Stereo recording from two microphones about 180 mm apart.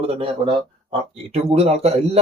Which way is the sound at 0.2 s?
30° right (ahead or behind).